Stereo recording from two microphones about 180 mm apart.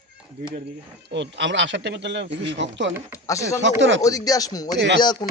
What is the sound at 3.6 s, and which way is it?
Speech, 90° right.